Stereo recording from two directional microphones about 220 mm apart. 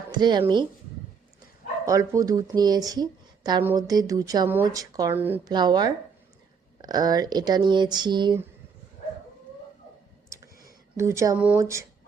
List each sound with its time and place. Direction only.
0.1 s speech: 20° right (ahead or behind)
1.8 s speech: 15° right (ahead or behind)
10.2 s clicking: 15° right (ahead or behind)
10.9 s speech: 15° right (ahead or behind)